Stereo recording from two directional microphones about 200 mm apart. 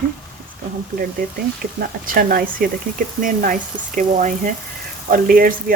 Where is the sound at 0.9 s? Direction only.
50° right (ahead or behind).